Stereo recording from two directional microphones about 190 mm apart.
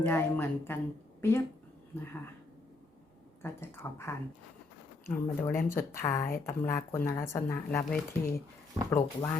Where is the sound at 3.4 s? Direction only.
15° left (ahead or behind).